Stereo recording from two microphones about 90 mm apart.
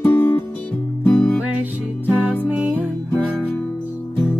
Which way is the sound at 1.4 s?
15° right (ahead or behind).